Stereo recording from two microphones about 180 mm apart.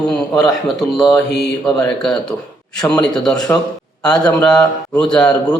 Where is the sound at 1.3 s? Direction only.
70° left (ahead or behind).